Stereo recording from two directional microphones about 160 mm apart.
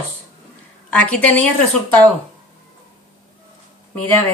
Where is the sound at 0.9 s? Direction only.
10° left (ahead or behind).